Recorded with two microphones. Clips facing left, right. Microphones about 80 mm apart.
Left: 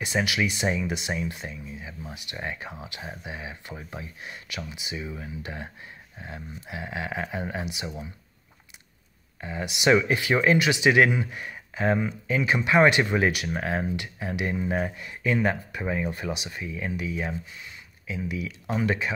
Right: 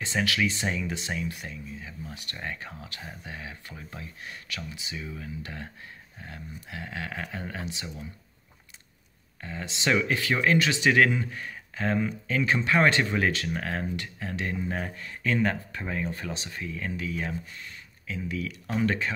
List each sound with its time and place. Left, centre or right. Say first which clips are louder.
0.0 s speech: left 1 dB; centre
9.4 s speech: left 5 dB; centre